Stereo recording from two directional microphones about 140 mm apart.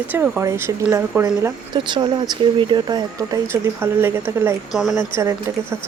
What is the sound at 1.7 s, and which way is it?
Speech, 35° right (ahead or behind).